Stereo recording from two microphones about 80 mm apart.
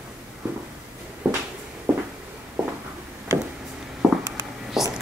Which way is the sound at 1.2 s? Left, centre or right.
Right.